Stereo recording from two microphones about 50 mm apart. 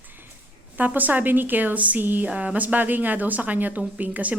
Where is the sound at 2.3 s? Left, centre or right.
Right.